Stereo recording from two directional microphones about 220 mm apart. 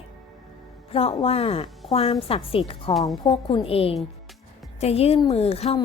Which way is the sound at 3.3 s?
25° left (ahead or behind).